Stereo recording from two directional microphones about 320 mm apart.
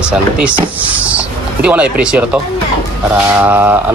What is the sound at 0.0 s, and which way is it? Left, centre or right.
Speech, centre.